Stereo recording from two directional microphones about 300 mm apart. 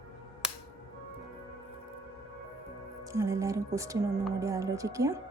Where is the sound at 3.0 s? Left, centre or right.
Centre.